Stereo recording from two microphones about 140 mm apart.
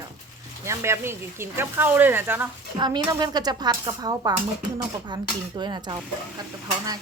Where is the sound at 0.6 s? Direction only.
20° right (ahead or behind).